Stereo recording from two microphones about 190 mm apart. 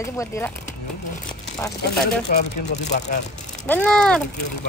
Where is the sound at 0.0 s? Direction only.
15° left (ahead or behind).